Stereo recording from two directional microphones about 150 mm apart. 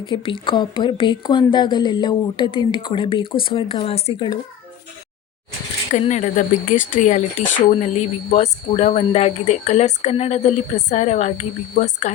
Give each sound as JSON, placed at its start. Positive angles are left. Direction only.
{"t": 0.0, "sound": "speech", "side_deg": 35}
{"t": 5.9, "sound": "speech", "side_deg": 55}